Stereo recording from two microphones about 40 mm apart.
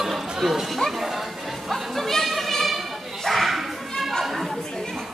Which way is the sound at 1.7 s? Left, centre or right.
Centre.